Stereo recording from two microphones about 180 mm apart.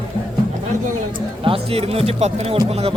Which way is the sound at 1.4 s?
30° right (ahead or behind).